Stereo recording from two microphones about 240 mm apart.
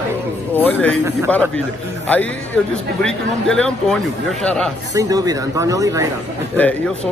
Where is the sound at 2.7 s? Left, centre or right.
Centre.